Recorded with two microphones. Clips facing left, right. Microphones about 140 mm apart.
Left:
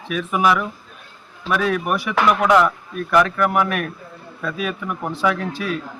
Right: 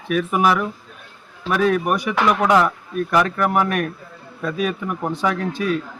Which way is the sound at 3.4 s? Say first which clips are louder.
Even; 35° right (ahead or behind).